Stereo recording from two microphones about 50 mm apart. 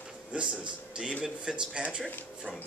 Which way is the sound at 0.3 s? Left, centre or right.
Centre.